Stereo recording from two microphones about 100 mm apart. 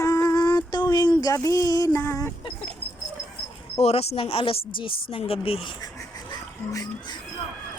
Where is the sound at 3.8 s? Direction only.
85° left.